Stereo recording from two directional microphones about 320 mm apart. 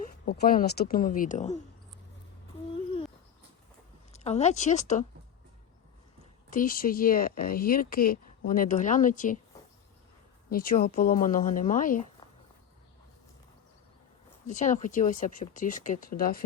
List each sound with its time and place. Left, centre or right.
0.3 s speech: left
4.1 s speech: centre
6.5 s speech: left
10.5 s speech: left
14.4 s speech: left